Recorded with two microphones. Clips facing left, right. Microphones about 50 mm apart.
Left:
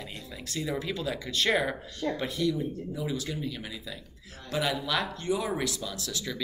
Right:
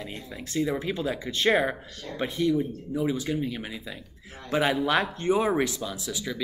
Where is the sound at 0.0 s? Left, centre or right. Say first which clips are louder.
Right 3 dB; right.